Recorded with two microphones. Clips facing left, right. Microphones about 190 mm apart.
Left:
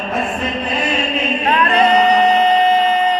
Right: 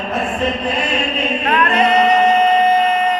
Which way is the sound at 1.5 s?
35° left (ahead or behind).